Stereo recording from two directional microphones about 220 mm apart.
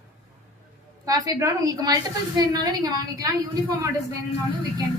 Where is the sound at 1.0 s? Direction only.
15° right (ahead or behind).